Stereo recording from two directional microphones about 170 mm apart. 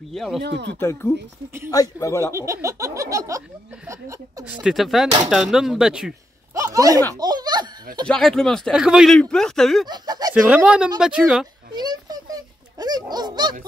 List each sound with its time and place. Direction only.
0.1 s speech: centre (ahead or behind)
0.4 s speech: 85° right
0.7 s a man's voice: 15° left (ahead or behind)
2.3 s speech: 15° right (ahead or behind)
4.5 s speech: 5° right (ahead or behind)
6.5 s a sound: 20° right (ahead or behind)
7.2 s laughter: 25° right (ahead or behind)
8.1 s speech: 5° left (ahead or behind)
9.8 s speech: 25° right (ahead or behind)
10.3 s speech: 5° right (ahead or behind)
11.7 s a child's voice: 25° right (ahead or behind)